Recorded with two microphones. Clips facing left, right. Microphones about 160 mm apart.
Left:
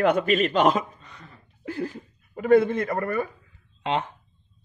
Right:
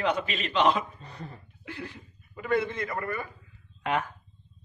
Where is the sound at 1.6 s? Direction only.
40° left (ahead or behind).